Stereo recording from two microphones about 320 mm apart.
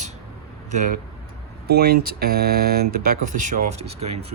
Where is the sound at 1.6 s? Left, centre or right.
Right.